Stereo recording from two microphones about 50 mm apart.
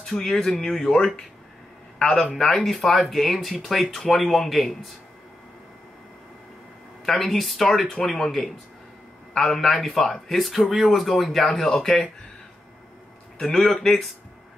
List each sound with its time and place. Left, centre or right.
0.0 s speech: centre
2.3 s speech: centre
2.6 s speech: centre
7.1 s speech: centre
11.5 s speech: centre
13.4 s speech: centre